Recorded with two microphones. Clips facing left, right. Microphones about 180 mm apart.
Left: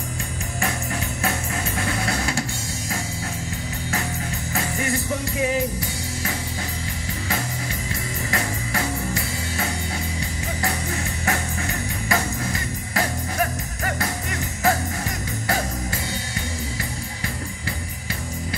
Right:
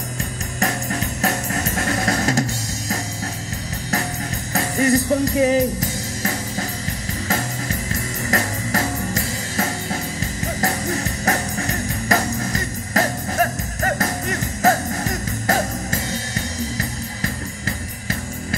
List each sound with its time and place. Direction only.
1.2 s music: 40° right (ahead or behind)
4.6 s music: 40° right (ahead or behind)